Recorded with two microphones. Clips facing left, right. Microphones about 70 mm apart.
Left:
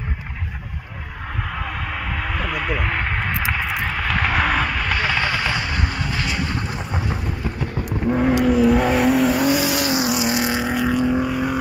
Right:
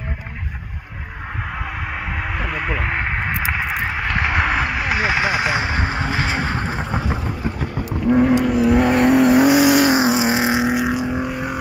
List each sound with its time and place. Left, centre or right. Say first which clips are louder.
1.5 s vehicle: even; centre
8.2 s vehicle: left 1 dB; centre
9.5 s vehicle: right 6 dB; right
9.8 s vehicle: right 4 dB; right
10.7 s vehicle: left 1 dB; centre